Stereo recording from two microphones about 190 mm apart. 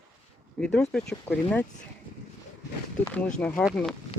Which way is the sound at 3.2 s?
5° left (ahead or behind).